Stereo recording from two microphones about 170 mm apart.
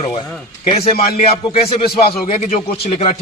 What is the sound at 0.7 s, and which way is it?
Speech, 35° left (ahead or behind).